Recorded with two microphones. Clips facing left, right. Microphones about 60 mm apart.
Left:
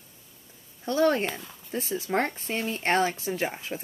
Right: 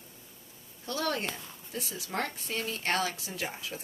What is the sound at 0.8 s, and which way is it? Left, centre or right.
Speech, left.